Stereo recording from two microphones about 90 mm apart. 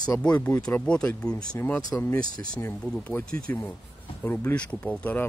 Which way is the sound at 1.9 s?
20° left (ahead or behind).